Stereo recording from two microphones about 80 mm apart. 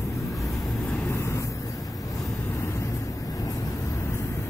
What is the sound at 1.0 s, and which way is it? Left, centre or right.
Vehicle, left.